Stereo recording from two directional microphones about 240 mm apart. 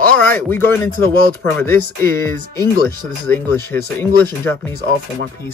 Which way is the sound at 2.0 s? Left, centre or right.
Centre.